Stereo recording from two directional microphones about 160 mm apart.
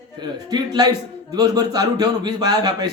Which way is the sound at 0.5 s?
25° right (ahead or behind).